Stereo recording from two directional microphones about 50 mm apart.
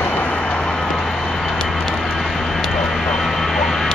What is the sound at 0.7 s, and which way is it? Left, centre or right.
Vehicle, centre.